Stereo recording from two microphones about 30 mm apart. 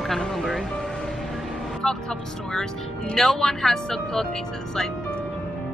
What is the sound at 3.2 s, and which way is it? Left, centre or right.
Speech, centre.